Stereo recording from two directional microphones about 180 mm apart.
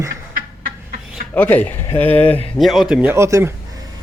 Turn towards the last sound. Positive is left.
turn(degrees=-20)  # may be behind; listen again after turning